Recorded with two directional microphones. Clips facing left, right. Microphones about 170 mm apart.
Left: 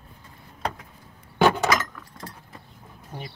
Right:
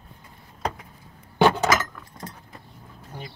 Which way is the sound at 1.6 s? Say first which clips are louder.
Right 1 dB; 10° right (ahead or behind).